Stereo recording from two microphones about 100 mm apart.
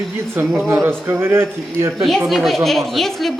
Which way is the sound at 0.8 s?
20° right (ahead or behind).